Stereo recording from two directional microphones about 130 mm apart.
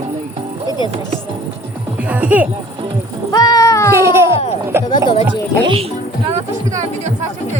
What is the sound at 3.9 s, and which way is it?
Baby cry, 20° right (ahead or behind).